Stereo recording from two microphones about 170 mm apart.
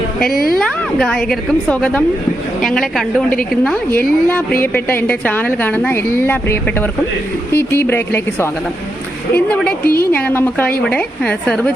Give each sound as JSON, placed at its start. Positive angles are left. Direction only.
{"t": 0.6, "sound": "a woman's voice", "side_deg": 5}
{"t": 9.8, "sound": "a woman's voice", "side_deg": 60}
{"t": 10.1, "sound": "a woman's voice", "side_deg": 10}